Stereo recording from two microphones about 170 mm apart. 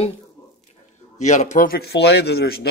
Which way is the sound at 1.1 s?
45° left (ahead or behind).